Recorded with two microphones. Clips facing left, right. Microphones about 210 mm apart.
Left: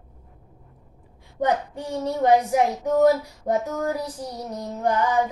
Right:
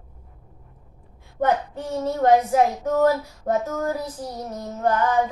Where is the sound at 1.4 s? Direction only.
15° left (ahead or behind).